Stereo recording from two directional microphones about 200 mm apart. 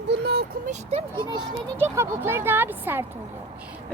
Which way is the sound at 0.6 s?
30° right (ahead or behind).